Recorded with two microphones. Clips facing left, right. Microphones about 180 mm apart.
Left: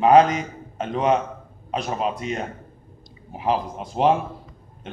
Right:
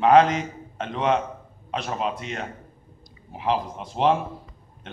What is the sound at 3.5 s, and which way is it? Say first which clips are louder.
Speech: left 2 dB; 10° left (ahead or behind).